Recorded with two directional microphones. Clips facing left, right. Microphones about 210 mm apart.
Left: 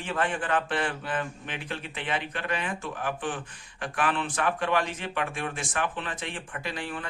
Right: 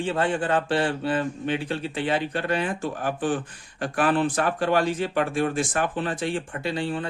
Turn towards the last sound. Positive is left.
turn(degrees=-30)  # may be behind; listen again after turning